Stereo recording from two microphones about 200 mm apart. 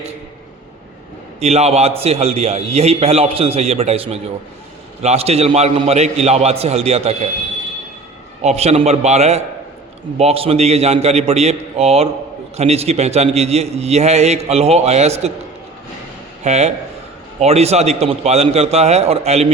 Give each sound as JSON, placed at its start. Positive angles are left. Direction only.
{"t": 1.4, "sound": "a man's voice", "side_deg": -30}
{"t": 8.4, "sound": "a man's voice", "side_deg": -30}
{"t": 16.4, "sound": "a man's voice", "side_deg": -35}